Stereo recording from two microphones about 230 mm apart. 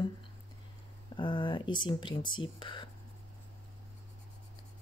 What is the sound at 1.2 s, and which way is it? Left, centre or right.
Speech, centre.